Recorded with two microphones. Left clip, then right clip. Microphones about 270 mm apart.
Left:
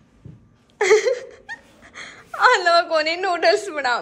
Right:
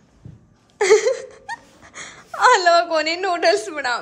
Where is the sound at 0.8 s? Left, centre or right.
Centre.